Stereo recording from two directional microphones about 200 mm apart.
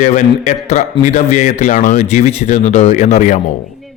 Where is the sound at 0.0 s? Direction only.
35° left (ahead or behind).